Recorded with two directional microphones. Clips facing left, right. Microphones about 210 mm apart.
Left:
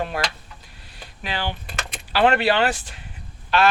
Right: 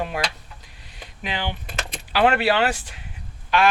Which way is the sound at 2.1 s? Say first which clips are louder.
Left 1 dB; 10° right (ahead or behind).